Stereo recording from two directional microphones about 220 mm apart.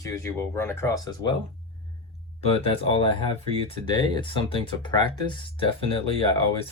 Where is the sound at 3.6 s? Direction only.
20° left (ahead or behind).